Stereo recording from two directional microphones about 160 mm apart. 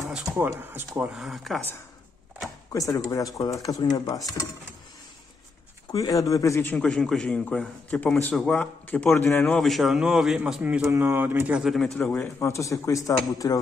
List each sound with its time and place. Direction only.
0.1 s speech: 5° right (ahead or behind)
0.5 s speech: 15° right (ahead or behind)
1.1 s speech: centre (ahead or behind)
2.7 s speech: 20° left (ahead or behind)
5.9 s a man's voice: 20° left (ahead or behind)